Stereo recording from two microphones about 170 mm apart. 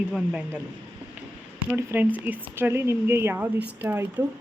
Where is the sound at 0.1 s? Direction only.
10° right (ahead or behind).